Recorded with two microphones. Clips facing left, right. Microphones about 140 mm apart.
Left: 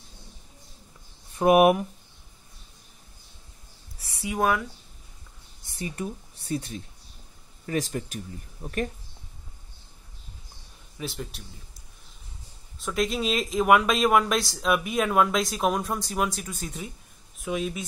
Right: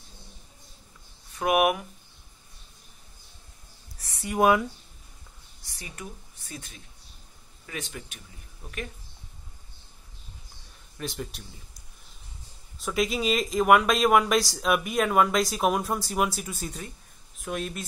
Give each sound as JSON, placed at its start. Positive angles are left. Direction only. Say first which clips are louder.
{"t": 1.3, "sound": "speech", "louder": "left 5 dB", "side_deg": 30}
{"t": 4.0, "sound": "a sound", "louder": "left 1 dB", "side_deg": 5}
{"t": 4.4, "sound": "speech", "louder": "right 4 dB", "side_deg": -15}
{"t": 5.7, "sound": "speech", "louder": "left 9 dB", "side_deg": 25}
{"t": 11.0, "sound": "speech", "louder": "even", "side_deg": 0}
{"t": 12.7, "sound": "speech", "louder": "even", "side_deg": 0}